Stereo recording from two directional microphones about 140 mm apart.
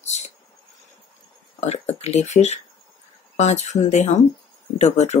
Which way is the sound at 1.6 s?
50° left (ahead or behind).